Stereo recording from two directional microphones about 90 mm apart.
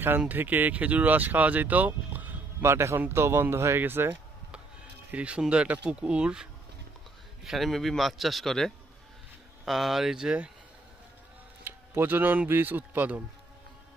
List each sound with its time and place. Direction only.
0.3 s speech: 20° right (ahead or behind)
5.1 s a man's voice: 15° right (ahead or behind)
11.6 s speech: 25° right (ahead or behind)